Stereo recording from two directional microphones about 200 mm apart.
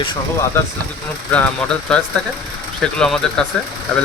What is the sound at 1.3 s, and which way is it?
Speech, 5° left (ahead or behind).